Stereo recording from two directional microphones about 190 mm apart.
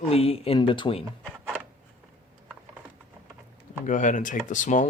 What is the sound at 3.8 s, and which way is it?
Speech, 40° left (ahead or behind).